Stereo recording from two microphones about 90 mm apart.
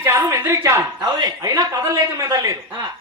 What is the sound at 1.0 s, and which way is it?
Speech, 50° right (ahead or behind).